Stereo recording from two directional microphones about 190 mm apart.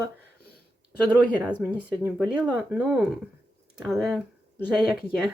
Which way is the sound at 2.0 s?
5° right (ahead or behind).